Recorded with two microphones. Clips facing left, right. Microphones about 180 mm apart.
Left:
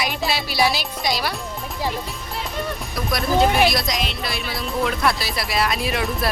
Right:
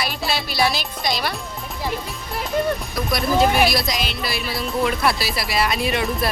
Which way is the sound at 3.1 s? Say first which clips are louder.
Even; centre (ahead or behind).